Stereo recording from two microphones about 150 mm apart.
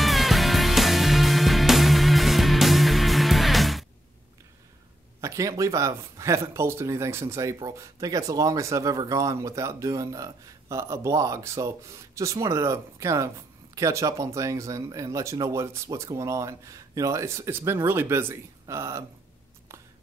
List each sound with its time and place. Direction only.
0.0 s music: centre (ahead or behind)
5.2 s speech: 20° right (ahead or behind)